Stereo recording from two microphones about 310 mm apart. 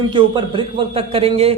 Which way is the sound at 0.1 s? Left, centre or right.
Centre.